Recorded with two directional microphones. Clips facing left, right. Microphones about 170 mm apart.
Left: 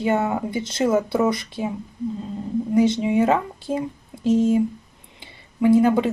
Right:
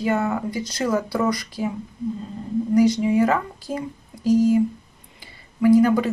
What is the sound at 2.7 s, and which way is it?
Speech, 25° left (ahead or behind).